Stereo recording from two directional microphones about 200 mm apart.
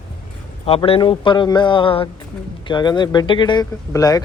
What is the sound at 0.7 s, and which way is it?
Speech, 25° left (ahead or behind).